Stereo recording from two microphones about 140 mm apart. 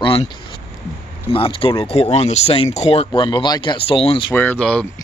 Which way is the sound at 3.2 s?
35° left (ahead or behind).